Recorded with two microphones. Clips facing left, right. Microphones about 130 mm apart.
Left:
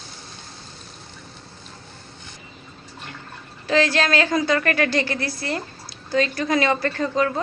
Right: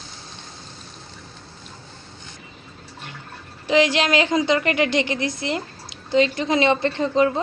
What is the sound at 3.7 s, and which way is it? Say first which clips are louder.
A woman's voice: right 2 dB; 15° right (ahead or behind).